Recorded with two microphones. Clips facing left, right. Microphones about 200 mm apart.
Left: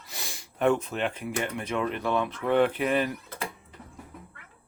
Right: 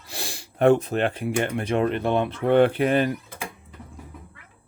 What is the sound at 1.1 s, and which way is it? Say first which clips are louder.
Speech: right 6 dB; 30° right (ahead or behind).